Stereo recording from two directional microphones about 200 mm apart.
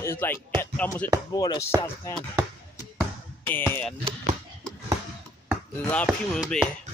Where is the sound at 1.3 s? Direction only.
20° left (ahead or behind).